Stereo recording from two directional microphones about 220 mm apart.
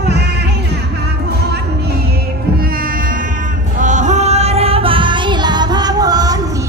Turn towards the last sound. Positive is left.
turn(degrees=-15)  # may be behind; listen again after turning